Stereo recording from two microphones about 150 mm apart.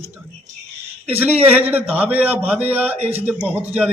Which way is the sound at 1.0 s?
10° right (ahead or behind).